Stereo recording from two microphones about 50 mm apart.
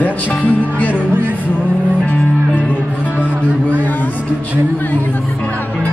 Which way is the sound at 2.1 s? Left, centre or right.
Left.